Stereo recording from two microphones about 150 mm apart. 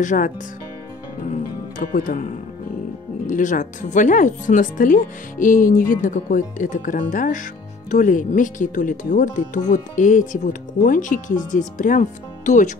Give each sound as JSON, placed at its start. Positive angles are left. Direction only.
{"t": 0.0, "sound": "speech", "side_deg": 55}
{"t": 1.8, "sound": "speech", "side_deg": 75}